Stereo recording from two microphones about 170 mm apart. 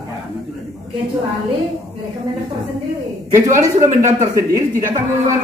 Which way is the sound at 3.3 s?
15° right (ahead or behind).